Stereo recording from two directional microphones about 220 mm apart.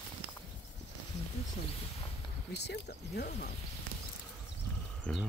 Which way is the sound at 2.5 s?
50° left (ahead or behind).